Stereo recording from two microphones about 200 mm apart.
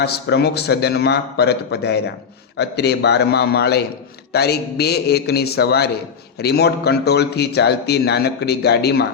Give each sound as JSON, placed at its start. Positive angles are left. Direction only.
{"t": 0.0, "sound": "a man's voice", "side_deg": 55}